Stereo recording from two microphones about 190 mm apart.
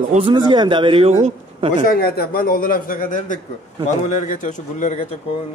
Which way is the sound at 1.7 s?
45° left (ahead or behind).